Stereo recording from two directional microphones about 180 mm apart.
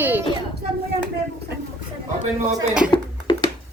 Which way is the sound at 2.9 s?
25° left (ahead or behind).